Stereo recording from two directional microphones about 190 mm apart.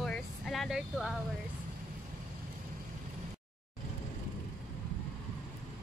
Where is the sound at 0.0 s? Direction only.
Centre (ahead or behind).